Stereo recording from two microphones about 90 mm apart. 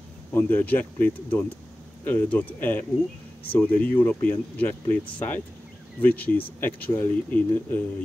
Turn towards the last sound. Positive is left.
turn(degrees=20)  # may be behind; listen again after turning